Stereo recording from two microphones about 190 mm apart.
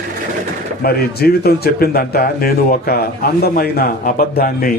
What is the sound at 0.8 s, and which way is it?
A man's voice, 55° left (ahead or behind).